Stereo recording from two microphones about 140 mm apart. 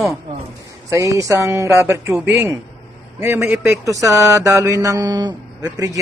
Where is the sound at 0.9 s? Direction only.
20° right (ahead or behind).